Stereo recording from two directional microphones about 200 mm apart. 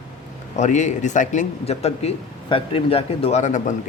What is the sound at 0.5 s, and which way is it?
Speech, 35° left (ahead or behind).